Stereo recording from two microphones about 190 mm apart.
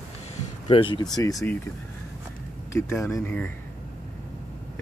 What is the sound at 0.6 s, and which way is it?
Speech, 25° left (ahead or behind).